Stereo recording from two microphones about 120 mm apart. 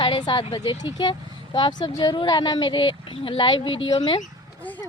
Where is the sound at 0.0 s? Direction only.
40° left (ahead or behind).